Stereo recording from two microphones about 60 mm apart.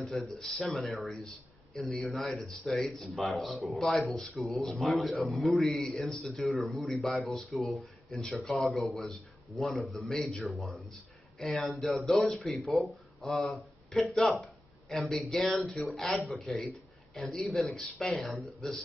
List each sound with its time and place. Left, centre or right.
0.0 s a man's voice: centre